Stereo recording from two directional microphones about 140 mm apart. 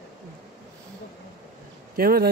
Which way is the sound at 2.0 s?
90° right.